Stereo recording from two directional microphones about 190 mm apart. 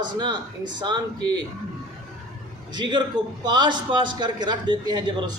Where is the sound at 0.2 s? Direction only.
25° right (ahead or behind).